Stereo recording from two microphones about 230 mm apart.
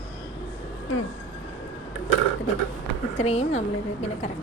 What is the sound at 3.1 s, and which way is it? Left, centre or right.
A woman's voice, left.